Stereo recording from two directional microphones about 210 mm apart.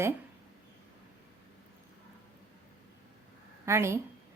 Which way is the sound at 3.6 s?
15° right (ahead or behind).